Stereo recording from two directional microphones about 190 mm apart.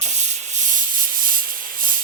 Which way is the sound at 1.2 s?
45° right (ahead or behind).